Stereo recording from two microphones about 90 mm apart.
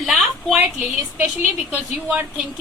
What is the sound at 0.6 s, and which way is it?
Speech, 20° right (ahead or behind).